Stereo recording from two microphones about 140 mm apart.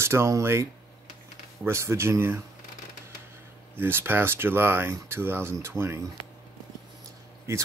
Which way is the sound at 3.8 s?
15° right (ahead or behind).